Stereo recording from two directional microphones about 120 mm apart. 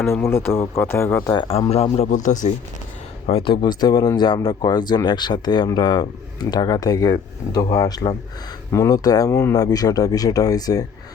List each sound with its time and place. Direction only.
0.1 s speech: 20° left (ahead or behind)
1.5 s speech: 55° left (ahead or behind); by 2.5 s 90° left
3.2 s speech: 50° left (ahead or behind); by 10.8 s 30° left (ahead or behind)